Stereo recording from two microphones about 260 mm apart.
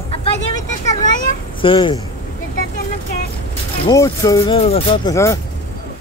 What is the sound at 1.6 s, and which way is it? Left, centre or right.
Speech, centre.